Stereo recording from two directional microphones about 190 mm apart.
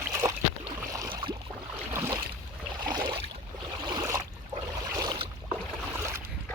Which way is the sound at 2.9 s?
20° right (ahead or behind).